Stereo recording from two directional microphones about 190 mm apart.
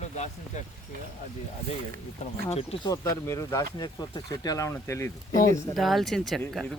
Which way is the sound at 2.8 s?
15° left (ahead or behind).